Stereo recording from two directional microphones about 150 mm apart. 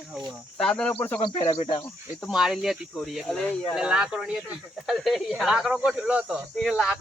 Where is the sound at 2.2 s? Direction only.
5° right (ahead or behind).